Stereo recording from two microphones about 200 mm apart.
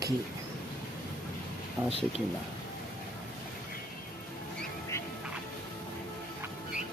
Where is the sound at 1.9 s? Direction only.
30° right (ahead or behind).